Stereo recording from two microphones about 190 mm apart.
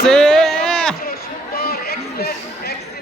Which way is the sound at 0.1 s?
Centre (ahead or behind).